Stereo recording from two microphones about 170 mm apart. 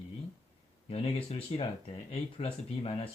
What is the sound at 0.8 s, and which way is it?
Speech, 35° left (ahead or behind).